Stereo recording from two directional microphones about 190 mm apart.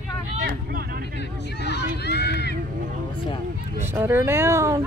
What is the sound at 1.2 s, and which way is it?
Speech, 60° left (ahead or behind).